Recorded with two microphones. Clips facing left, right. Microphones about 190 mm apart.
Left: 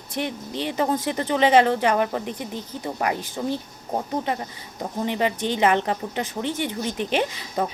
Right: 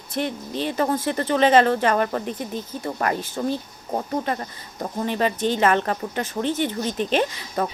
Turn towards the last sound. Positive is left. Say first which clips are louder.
# right 1 dB
turn(degrees=15)  # may be behind; listen again after turning